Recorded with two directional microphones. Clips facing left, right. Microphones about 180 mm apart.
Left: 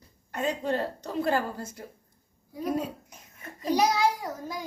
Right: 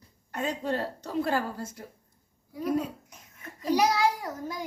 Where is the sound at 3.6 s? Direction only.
20° left (ahead or behind).